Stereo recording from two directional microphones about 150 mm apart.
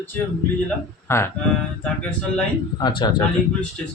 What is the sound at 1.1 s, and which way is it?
Speech, 20° left (ahead or behind).